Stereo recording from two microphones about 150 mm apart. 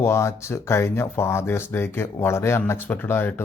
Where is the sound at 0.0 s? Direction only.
20° left (ahead or behind).